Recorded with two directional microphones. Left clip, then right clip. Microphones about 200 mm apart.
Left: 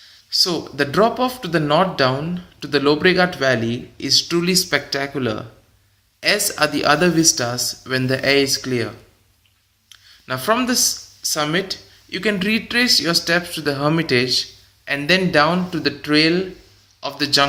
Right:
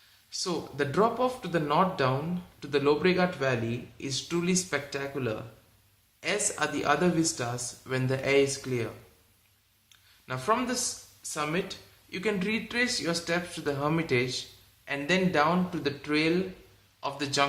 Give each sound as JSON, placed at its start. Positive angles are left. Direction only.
{"t": 0.3, "sound": "speech", "side_deg": 20}
{"t": 10.2, "sound": "a man's voice", "side_deg": 20}